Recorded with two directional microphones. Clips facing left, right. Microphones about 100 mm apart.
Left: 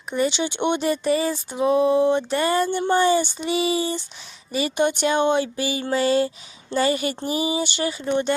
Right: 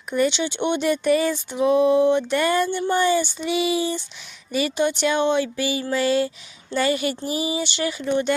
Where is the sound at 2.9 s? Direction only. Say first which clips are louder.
Left 2 dB; 40° left (ahead or behind).